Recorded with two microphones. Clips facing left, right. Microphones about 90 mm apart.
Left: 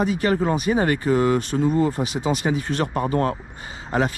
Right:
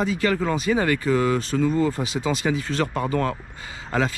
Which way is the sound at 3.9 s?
25° left (ahead or behind).